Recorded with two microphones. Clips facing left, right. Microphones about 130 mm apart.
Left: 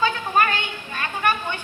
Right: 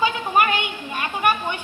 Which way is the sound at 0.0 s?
15° right (ahead or behind).